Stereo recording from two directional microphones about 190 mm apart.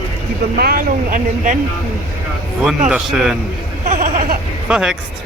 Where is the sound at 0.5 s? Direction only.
50° right (ahead or behind).